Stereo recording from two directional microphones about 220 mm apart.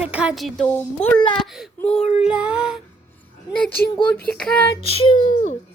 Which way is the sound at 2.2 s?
5° right (ahead or behind).